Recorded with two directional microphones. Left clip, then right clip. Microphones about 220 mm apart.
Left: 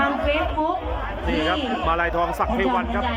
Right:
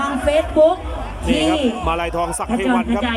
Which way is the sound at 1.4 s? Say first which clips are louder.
Right 2 dB; 10° right (ahead or behind).